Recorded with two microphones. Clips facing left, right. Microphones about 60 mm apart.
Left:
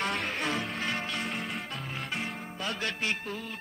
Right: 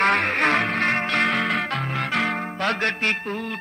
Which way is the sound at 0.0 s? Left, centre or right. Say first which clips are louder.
Right 12 dB; right.